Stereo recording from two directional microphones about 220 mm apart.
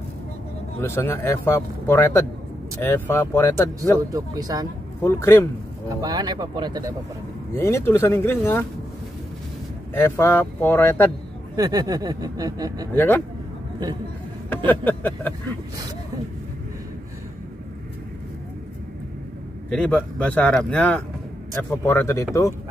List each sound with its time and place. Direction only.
0.7 s speech: 10° left (ahead or behind)
4.1 s speech: 15° right (ahead or behind)
5.0 s speech: 10° left (ahead or behind)
5.9 s speech: 15° right (ahead or behind)
7.5 s speech: 10° left (ahead or behind)
9.9 s speech: 10° left (ahead or behind)
11.5 s speech: 15° right (ahead or behind)
12.9 s speech: 10° left (ahead or behind)
14.7 s speech: 10° left (ahead or behind)
19.7 s speech: 5° left (ahead or behind)